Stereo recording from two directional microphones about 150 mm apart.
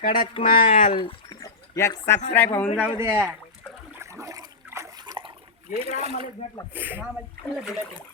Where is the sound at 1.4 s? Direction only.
20° left (ahead or behind).